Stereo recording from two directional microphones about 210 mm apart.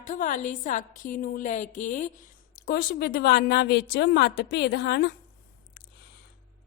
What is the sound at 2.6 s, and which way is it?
A woman's voice, 50° left (ahead or behind).